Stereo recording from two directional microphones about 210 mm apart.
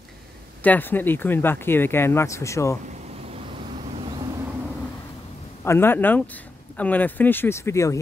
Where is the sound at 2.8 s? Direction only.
30° right (ahead or behind).